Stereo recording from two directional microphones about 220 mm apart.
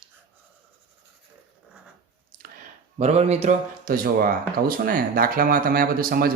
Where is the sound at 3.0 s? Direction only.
30° right (ahead or behind).